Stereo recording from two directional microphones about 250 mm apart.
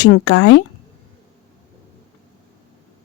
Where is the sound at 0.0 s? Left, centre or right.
Left.